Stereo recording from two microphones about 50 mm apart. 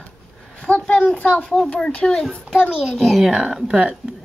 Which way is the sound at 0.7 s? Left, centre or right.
Left.